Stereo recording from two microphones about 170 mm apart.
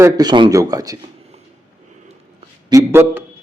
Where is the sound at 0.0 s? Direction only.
25° right (ahead or behind).